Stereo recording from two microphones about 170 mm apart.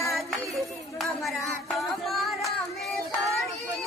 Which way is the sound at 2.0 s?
Centre (ahead or behind).